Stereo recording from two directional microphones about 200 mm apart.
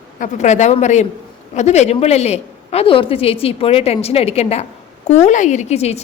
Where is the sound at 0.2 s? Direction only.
35° left (ahead or behind).